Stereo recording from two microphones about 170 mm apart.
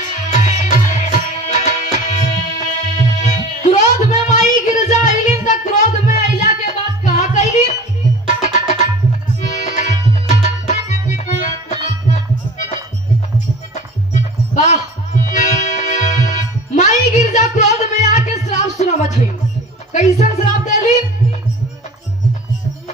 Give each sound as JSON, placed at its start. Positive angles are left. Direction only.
{"t": 0.3, "sound": "music", "side_deg": 45}
{"t": 1.5, "sound": "tabla", "side_deg": 45}
{"t": 8.4, "sound": "music", "side_deg": 45}
{"t": 13.7, "sound": "music", "side_deg": 45}